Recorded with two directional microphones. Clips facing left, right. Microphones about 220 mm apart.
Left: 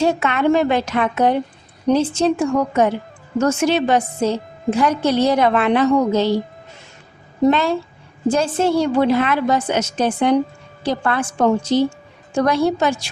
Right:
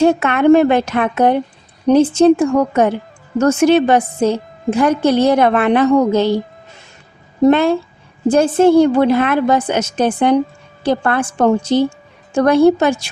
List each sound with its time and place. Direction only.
0.0 s a woman's voice: 55° right (ahead or behind)
7.5 s a woman's voice: 55° right (ahead or behind)